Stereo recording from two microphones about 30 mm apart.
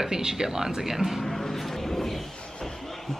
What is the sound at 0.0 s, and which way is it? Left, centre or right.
Speech, centre.